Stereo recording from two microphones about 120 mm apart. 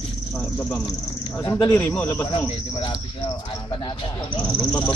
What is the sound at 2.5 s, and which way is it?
Cricket, 45° left (ahead or behind).